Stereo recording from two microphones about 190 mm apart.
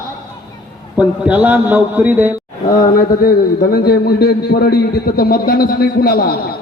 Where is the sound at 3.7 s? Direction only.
55° left (ahead or behind).